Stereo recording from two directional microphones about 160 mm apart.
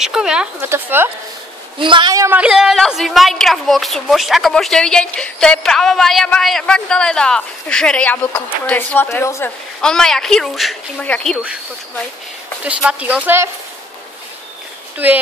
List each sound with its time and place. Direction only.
0.0 s a woman's voice: 5° right (ahead or behind)
1.8 s a woman's voice: 30° right (ahead or behind)
2.3 s a woman's voice: 5° right (ahead or behind); by 9.5 s 15° left (ahead or behind)
9.8 s a woman's voice: 5° left (ahead or behind)
12.6 s a woman's voice: 10° right (ahead or behind)
15.0 s a woman's voice: 10° right (ahead or behind)